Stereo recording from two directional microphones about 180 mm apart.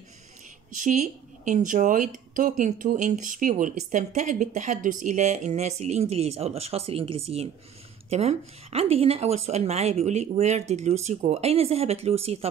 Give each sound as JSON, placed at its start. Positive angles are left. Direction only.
{"t": 0.7, "sound": "speech", "side_deg": -45}